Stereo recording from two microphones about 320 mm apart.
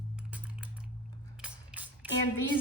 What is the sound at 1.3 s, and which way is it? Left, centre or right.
Mechanisms, centre.